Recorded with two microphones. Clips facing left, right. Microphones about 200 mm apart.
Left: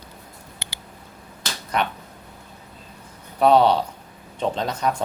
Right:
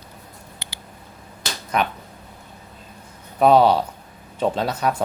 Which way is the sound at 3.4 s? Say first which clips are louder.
Right 1 dB; 10° right (ahead or behind).